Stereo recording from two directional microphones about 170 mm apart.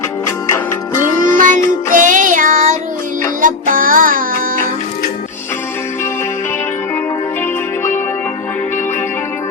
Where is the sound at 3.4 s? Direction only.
50° right (ahead or behind).